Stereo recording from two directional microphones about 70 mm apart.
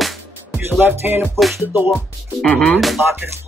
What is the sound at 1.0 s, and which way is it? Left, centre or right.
Music, right.